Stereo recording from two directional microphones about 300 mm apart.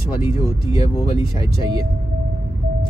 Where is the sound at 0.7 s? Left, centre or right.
Centre.